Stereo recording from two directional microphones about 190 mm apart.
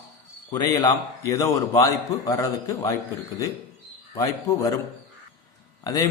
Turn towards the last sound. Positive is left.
turn(degrees=20)  # may be behind; listen again after turning